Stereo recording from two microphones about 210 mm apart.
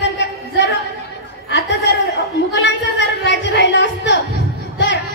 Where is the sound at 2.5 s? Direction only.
55° left (ahead or behind).